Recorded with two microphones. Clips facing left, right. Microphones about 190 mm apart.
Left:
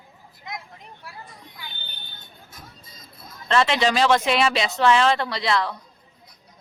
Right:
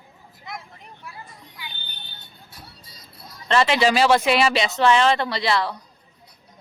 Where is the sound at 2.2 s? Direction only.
35° right (ahead or behind).